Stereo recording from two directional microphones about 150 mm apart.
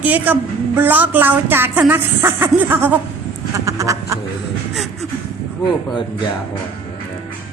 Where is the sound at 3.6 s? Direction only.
20° right (ahead or behind).